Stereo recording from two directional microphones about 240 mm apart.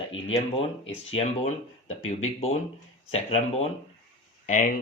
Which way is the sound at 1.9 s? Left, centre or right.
Left.